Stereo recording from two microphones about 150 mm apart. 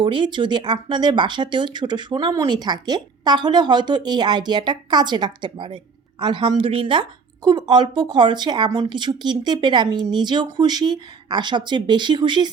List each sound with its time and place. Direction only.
0.0 s speech: 35° right (ahead or behind)